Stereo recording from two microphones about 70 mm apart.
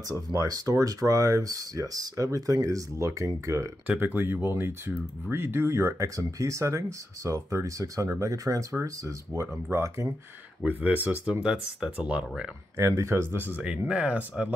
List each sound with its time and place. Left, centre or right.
0.1 s speech: right
3.8 s speech: right
10.6 s speech: right
11.4 s speech: centre
12.7 s speech: right
13.6 s speech: centre